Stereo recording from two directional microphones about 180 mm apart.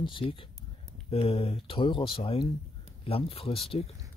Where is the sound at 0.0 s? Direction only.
30° left (ahead or behind).